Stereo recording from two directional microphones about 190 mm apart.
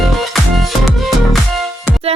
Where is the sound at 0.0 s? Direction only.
Centre (ahead or behind).